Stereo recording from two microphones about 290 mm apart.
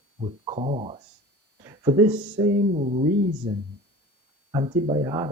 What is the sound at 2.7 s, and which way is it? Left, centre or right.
Speech, right.